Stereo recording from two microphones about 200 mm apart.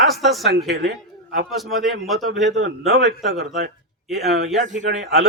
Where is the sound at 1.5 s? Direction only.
Centre (ahead or behind).